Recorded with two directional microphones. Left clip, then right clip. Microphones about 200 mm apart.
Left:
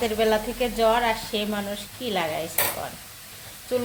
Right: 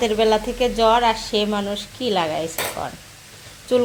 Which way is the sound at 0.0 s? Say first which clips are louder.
Right 5 dB; 20° right (ahead or behind).